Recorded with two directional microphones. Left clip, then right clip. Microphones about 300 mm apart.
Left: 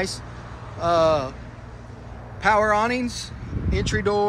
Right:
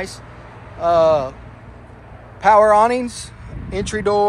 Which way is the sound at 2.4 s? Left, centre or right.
Centre.